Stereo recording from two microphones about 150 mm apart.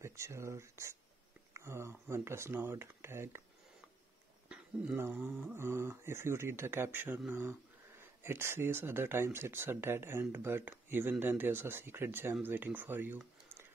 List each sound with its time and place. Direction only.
0.0 s speech: 20° right (ahead or behind)
4.5 s speech: 10° right (ahead or behind)